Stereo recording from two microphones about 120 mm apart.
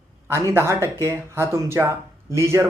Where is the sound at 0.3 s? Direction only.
20° right (ahead or behind).